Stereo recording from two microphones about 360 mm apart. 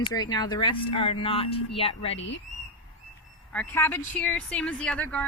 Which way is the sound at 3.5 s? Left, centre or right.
Centre.